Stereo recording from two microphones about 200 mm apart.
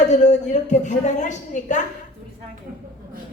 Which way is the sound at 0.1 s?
35° left (ahead or behind).